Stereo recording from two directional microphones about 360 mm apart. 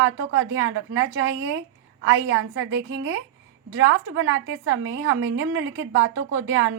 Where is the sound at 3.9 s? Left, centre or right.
Right.